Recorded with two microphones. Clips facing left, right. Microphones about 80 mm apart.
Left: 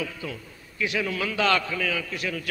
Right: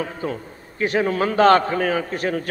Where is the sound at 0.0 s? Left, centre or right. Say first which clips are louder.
Right 7 dB; right.